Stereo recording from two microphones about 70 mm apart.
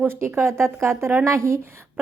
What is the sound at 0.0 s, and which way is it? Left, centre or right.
Speech, right.